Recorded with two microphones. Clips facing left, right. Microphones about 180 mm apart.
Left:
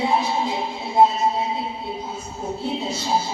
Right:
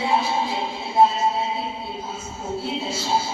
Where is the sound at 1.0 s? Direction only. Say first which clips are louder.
Left 1 dB; 15° left (ahead or behind).